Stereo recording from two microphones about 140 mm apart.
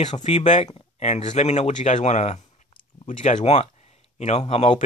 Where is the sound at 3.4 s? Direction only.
45° left (ahead or behind).